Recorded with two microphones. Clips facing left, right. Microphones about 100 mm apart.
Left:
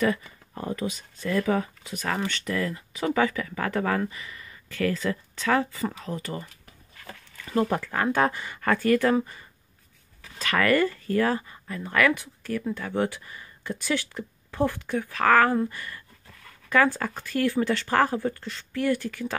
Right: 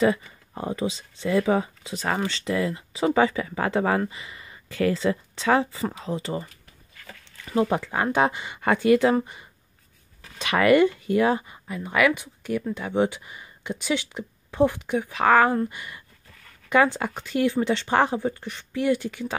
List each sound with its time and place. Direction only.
0.0 s speech: 20° right (ahead or behind)
7.4 s speech: 10° right (ahead or behind)